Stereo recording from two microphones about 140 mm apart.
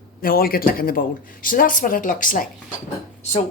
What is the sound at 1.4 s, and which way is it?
Speech, 80° left.